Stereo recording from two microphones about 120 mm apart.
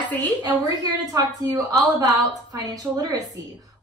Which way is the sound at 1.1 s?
30° right (ahead or behind).